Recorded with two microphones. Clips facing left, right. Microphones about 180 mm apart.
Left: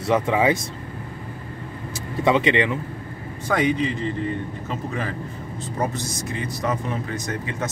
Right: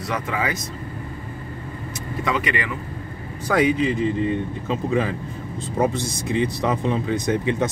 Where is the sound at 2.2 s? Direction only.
25° left (ahead or behind).